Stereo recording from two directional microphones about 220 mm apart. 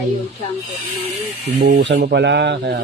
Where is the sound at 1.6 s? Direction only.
45° right (ahead or behind).